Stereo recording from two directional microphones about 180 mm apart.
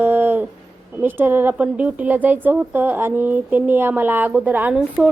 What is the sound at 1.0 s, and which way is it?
Speech, 10° right (ahead or behind).